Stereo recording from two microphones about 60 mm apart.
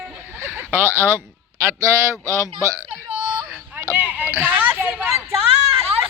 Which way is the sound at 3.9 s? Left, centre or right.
Right.